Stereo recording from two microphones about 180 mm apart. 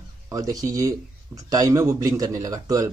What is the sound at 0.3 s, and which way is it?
Speech, 20° right (ahead or behind).